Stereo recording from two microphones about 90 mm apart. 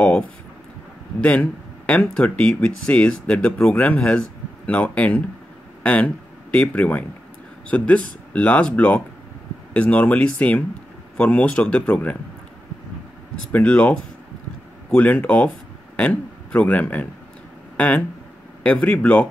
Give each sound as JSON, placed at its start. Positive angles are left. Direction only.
{"t": 1.2, "sound": "speech", "side_deg": 15}
{"t": 13.5, "sound": "speech", "side_deg": 15}